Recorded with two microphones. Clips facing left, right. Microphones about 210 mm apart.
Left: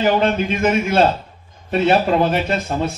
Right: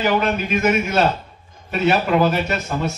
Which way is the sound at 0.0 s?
30° left (ahead or behind).